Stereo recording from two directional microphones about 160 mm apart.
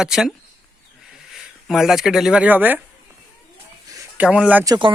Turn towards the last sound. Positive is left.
turn(degrees=-25)  # may be behind; listen again after turning